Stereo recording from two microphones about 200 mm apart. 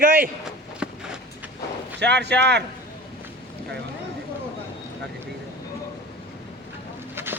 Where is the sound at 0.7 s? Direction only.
5° right (ahead or behind).